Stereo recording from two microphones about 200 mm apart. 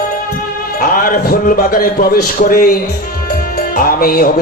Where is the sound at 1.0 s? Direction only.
45° left (ahead or behind).